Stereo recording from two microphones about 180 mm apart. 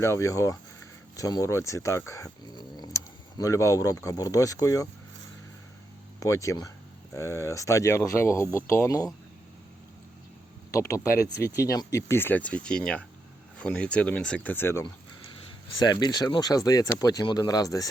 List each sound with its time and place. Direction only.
0.0 s speech: 15° left (ahead or behind)
6.1 s speech: 15° left (ahead or behind)
10.7 s speech: 15° left (ahead or behind)